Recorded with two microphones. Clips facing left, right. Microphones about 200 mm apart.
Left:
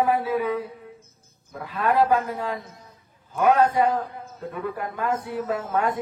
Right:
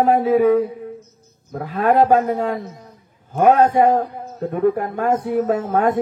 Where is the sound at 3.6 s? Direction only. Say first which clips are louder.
Right 6 dB; 45° right (ahead or behind).